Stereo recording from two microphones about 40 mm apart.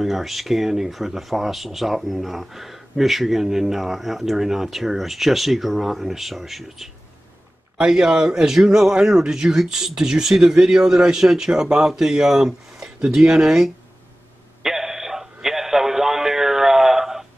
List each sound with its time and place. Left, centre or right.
0.0 s speech: centre
7.9 s speech: centre
10.4 s speech: right
10.8 s speech: centre
14.6 s a sound: centre